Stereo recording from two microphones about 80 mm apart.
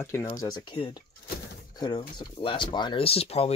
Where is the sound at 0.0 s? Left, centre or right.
Left.